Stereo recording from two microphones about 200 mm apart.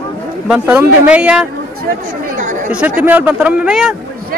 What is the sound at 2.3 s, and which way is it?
Speech, 40° right (ahead or behind).